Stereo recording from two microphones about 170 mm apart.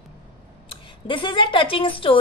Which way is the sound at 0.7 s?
30° left (ahead or behind).